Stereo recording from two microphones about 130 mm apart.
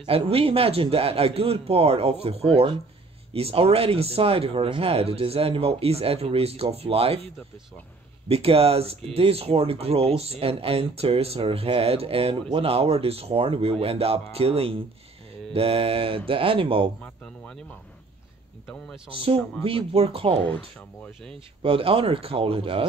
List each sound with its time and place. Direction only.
0.0 s speech: 45° right (ahead or behind)
8.3 s speech: 50° right (ahead or behind)
17.0 s a sound: 10° left (ahead or behind)
19.1 s speech: 45° right (ahead or behind)
20.4 s speech: 10° left (ahead or behind)
21.6 s speech: 45° right (ahead or behind)